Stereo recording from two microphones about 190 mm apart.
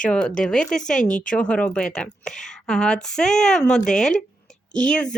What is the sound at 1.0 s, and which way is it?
Speech, 45° left (ahead or behind).